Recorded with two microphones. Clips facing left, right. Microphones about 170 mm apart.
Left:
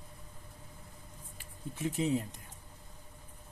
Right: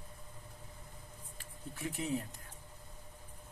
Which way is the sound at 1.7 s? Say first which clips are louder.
Left 6 dB; 20° left (ahead or behind).